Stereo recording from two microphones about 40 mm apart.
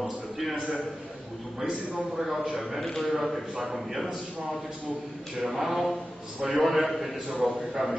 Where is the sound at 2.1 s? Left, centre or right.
Centre.